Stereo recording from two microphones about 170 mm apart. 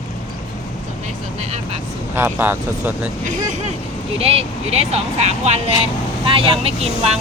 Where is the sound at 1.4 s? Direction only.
40° right (ahead or behind).